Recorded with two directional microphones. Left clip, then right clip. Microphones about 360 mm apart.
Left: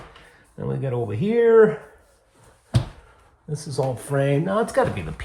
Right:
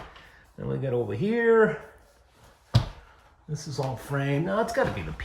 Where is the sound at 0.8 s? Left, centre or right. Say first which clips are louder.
Even; left.